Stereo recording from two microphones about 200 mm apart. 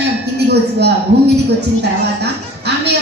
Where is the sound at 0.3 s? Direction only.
55° right (ahead or behind).